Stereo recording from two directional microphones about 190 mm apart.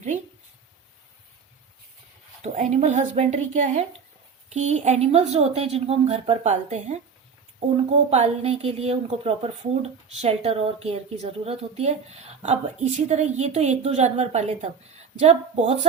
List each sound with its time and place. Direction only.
2.4 s a woman's voice: 40° right (ahead or behind)